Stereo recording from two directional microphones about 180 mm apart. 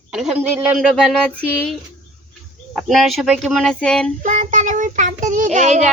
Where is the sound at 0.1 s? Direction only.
5° right (ahead or behind).